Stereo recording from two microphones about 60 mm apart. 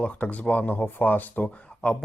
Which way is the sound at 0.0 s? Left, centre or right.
Left.